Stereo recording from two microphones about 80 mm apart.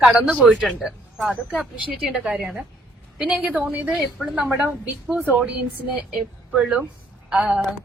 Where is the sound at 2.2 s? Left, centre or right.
Centre.